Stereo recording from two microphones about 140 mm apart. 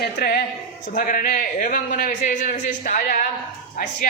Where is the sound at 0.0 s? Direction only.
90° left; by 3.2 s 70° left (ahead or behind).